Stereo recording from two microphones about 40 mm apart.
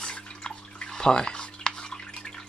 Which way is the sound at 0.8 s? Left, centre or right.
Centre.